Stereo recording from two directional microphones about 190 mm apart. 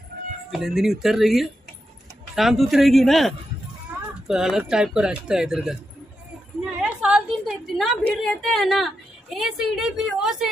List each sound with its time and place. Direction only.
0.1 s cat: 50° right (ahead or behind)
0.5 s a woman's voice: centre (ahead or behind)
6.8 s a sound: 5° right (ahead or behind)
8.2 s a woman's voice: centre (ahead or behind)